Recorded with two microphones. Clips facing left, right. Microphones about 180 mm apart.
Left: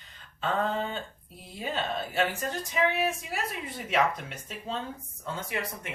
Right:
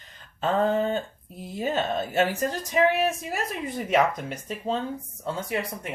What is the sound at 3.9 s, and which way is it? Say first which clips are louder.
Speech: right 4 dB; 40° right (ahead or behind).